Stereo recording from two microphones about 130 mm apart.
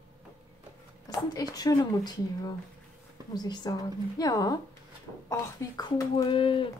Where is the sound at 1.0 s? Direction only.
30° left (ahead or behind).